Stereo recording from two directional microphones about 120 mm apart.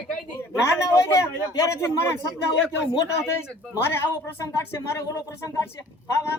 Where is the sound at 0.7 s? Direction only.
25° left (ahead or behind).